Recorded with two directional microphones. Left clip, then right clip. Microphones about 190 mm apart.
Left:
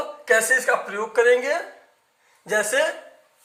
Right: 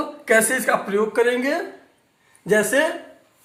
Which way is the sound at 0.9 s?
25° left (ahead or behind).